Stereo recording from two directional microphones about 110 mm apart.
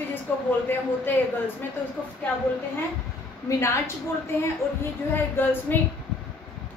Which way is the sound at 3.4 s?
25° left (ahead or behind).